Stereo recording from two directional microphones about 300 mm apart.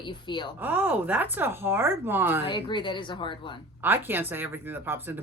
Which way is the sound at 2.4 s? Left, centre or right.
Centre.